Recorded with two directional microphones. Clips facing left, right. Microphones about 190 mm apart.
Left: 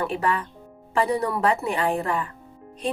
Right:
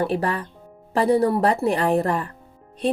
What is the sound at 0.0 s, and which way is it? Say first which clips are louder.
A woman's voice: right 2 dB; 35° right (ahead or behind).